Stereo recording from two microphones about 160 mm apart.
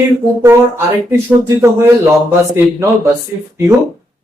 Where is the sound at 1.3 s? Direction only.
15° right (ahead or behind).